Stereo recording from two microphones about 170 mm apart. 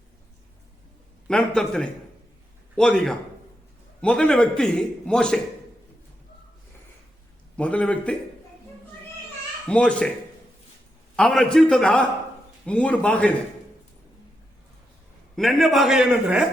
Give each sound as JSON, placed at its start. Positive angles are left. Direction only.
{"t": 1.3, "sound": "a man's voice", "side_deg": 5}
{"t": 7.5, "sound": "a man's voice", "side_deg": 5}
{"t": 9.6, "sound": "a man's voice", "side_deg": 5}
{"t": 11.2, "sound": "a man's voice", "side_deg": 5}
{"t": 15.4, "sound": "a man's voice", "side_deg": 0}